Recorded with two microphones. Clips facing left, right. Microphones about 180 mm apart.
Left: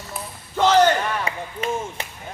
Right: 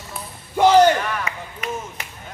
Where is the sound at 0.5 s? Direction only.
10° right (ahead or behind).